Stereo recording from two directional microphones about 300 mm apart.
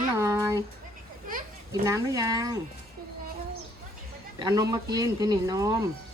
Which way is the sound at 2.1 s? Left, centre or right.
Centre.